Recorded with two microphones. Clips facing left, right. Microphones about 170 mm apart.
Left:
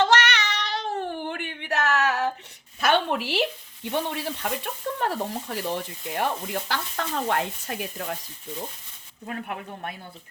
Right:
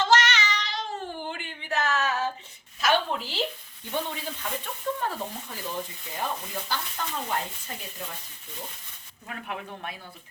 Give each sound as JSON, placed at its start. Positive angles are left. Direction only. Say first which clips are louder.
{"t": 0.0, "sound": "cat", "louder": "left 2 dB", "side_deg": 65}
{"t": 2.8, "sound": "a sound", "louder": "left 3 dB", "side_deg": 65}
{"t": 4.1, "sound": "speech", "louder": "left 5 dB", "side_deg": 70}
{"t": 9.2, "sound": "speech", "louder": "left 3 dB", "side_deg": 45}